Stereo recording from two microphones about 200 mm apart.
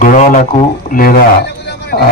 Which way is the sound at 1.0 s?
50° left (ahead or behind).